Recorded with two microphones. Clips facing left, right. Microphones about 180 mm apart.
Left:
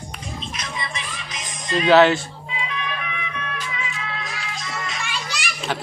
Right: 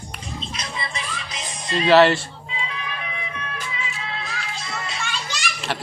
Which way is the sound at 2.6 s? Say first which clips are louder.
Left 3 dB; 30° right (ahead or behind).